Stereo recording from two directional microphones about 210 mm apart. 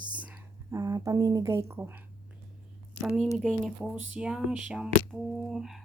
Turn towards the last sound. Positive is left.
turn(degrees=0)  # may be behind; listen again after turning